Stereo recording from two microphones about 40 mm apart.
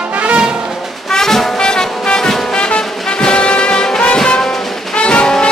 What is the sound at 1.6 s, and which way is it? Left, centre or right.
Music, centre.